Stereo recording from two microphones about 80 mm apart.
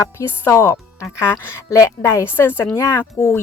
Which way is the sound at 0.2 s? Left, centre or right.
Left.